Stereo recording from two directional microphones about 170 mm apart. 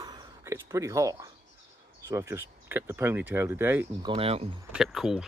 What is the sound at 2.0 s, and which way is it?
Speech, 15° right (ahead or behind).